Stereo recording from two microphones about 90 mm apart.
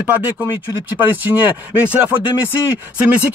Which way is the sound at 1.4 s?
20° right (ahead or behind).